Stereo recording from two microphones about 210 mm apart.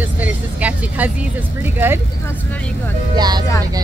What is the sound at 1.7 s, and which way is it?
Speech, 10° right (ahead or behind).